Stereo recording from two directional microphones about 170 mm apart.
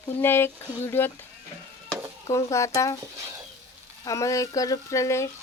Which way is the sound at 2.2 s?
15° left (ahead or behind).